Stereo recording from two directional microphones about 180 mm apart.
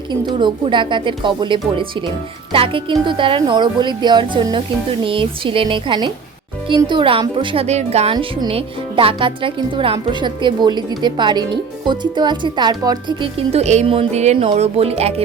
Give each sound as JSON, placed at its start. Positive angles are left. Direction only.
{"t": 0.3, "sound": "a woman's voice", "side_deg": -25}